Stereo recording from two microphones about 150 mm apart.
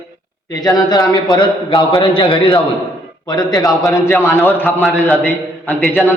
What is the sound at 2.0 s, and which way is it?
A man's voice, 35° left (ahead or behind).